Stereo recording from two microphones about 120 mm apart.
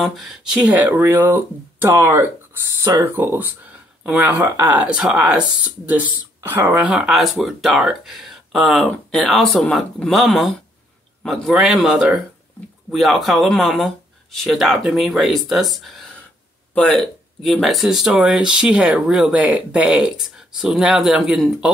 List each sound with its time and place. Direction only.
0.0 s speech: centre (ahead or behind)